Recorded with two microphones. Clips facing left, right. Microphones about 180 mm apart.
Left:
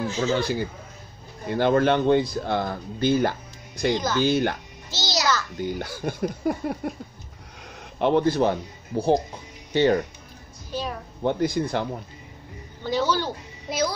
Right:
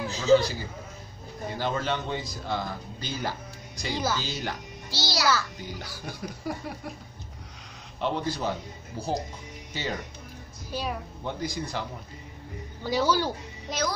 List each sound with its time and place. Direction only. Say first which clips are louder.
0.2 s a man's voice: right 4 dB; 50° left (ahead or behind)
3.9 s speech: left 2 dB; 10° right (ahead or behind)
4.2 s a man's voice: left 12 dB; 55° left (ahead or behind)
4.9 s a child's voice: left 1 dB; 20° left (ahead or behind)
5.6 s speech: left 10 dB; 55° left (ahead or behind)
8.0 s a man's voice: left 9 dB; 60° left (ahead or behind)
10.7 s a woman's voice: left 2 dB; 10° right (ahead or behind)
11.2 s a man's voice: left 10 dB; 55° left (ahead or behind)
12.8 s speech: left 1 dB; 10° right (ahead or behind)
13.7 s a child's voice: left 4 dB; 10° left (ahead or behind)